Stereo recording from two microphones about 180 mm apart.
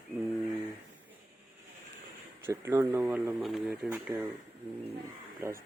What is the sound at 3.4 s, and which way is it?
Speech, centre (ahead or behind).